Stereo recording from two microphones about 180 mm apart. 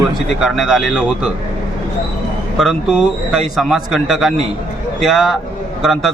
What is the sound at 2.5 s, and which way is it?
Speech, centre (ahead or behind).